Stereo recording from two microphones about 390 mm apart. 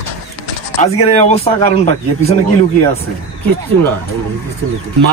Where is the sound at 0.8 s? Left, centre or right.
Centre.